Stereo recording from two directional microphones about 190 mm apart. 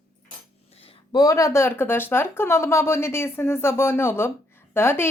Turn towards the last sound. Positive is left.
turn(degrees=10)  # may be behind; listen again after turning